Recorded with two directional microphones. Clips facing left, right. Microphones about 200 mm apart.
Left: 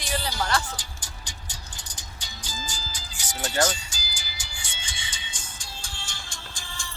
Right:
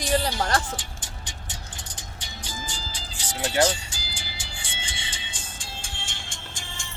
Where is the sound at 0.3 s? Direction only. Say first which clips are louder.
Right 2 dB; 25° right (ahead or behind).